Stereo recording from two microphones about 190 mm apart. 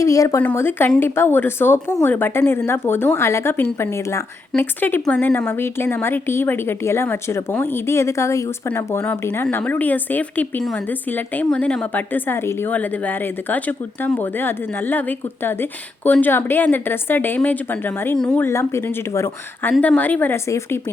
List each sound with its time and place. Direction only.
0.0 s a woman's voice: 15° left (ahead or behind)
16.0 s a woman's voice: 10° left (ahead or behind)